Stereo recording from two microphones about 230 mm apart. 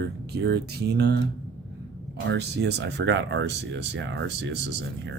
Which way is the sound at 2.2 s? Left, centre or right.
Right.